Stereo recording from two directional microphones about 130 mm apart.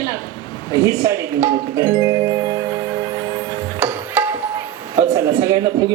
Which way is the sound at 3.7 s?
15° right (ahead or behind).